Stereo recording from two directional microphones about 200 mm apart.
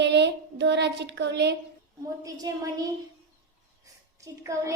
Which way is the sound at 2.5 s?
20° right (ahead or behind).